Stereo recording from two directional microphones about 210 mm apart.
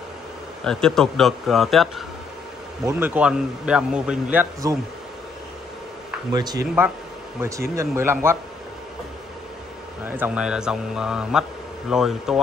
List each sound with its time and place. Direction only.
0.7 s a man's voice: 5° left (ahead or behind)
2.8 s a man's voice: 10° right (ahead or behind)
6.3 s a man's voice: 20° right (ahead or behind)
10.0 s a man's voice: 10° right (ahead or behind)